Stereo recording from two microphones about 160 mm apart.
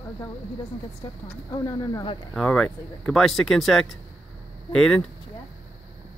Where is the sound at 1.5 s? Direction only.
20° left (ahead or behind).